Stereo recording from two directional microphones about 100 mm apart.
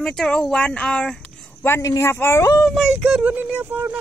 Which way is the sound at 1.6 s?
20° left (ahead or behind).